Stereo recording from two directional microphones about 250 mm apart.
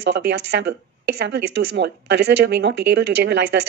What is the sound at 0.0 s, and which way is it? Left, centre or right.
Speech, right.